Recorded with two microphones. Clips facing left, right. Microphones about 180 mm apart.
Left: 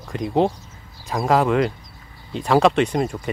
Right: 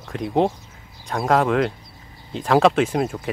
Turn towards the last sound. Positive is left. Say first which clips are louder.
# even
turn(degrees=0)  # may be behind; listen again after turning